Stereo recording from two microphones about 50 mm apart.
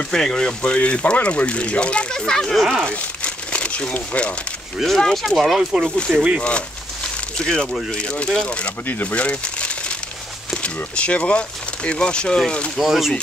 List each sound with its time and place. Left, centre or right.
0.1 s speech: centre
4.8 s speech: centre
5.4 s speech: centre
6.4 s a sound: left
7.9 s speech: centre
8.8 s speech: left
12.7 s speech: centre